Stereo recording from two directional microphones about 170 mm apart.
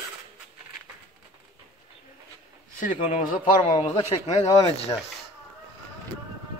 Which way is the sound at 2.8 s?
50° left (ahead or behind).